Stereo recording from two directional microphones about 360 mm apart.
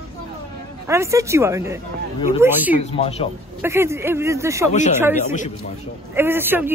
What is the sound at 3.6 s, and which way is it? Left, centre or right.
A man's voice, centre.